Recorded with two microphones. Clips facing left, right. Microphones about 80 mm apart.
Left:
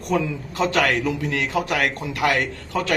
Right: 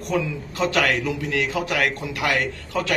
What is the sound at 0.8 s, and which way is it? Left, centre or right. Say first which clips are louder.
Speech: left 1 dB; centre.